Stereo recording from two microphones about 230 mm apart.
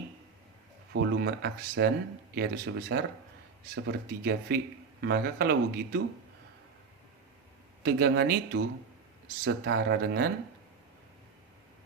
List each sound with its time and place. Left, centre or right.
0.9 s speech: right
7.9 s speech: right